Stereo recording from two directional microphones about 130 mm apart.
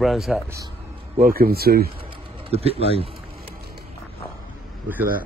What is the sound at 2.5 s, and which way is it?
Speech, 50° right (ahead or behind).